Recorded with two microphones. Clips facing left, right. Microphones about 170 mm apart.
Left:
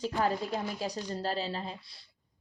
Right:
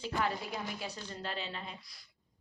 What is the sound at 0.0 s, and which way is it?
Speech, 40° left (ahead or behind).